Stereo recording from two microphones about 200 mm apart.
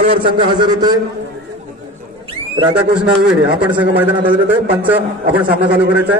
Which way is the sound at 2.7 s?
5° right (ahead or behind).